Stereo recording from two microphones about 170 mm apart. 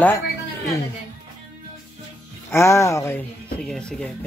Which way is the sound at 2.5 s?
15° left (ahead or behind).